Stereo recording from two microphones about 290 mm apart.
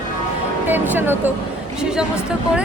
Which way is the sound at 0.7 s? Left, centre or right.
Centre.